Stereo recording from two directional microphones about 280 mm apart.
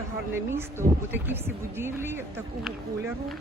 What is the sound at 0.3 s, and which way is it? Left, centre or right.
Speech, centre.